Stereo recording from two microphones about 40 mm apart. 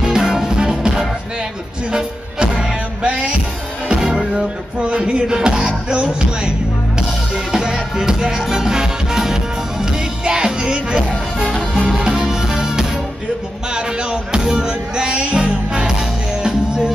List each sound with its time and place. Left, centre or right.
0.0 s music: centre
4.2 s music: centre
4.8 s music: right
12.2 s music: centre
13.7 s a sound: right
14.4 s music: centre
14.7 s music: right